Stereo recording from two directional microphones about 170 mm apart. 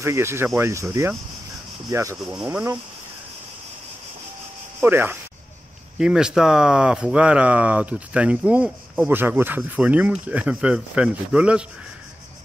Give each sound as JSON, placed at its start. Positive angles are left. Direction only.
{"t": 0.0, "sound": "speech", "side_deg": -15}
{"t": 2.3, "sound": "speech", "side_deg": -5}
{"t": 4.7, "sound": "speech", "side_deg": -10}